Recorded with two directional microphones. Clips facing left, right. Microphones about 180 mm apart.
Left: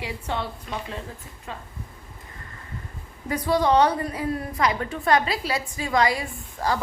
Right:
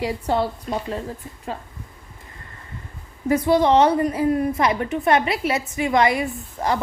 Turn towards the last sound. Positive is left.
turn(degrees=-20)  # may be behind; listen again after turning